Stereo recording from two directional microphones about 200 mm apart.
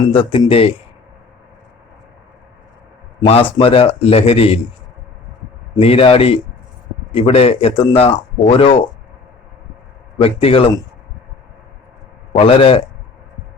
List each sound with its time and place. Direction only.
0.1 s speech: 25° left (ahead or behind)
3.2 s speech: 30° left (ahead or behind)
5.8 s speech: 30° left (ahead or behind)
10.2 s speech: 30° left (ahead or behind)
12.3 s speech: 25° left (ahead or behind)